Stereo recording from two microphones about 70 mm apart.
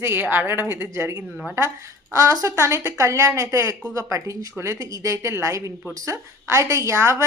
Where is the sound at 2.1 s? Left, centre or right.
Right.